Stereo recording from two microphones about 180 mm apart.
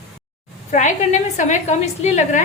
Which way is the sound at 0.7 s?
45° left (ahead or behind).